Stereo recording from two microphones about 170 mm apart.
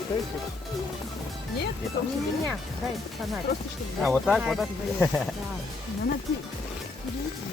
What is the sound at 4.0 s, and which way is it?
Speech, centre (ahead or behind).